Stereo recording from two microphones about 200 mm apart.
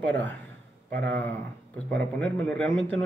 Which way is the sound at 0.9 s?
55° right (ahead or behind).